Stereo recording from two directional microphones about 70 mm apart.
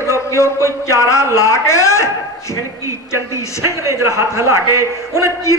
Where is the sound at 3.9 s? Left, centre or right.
Right.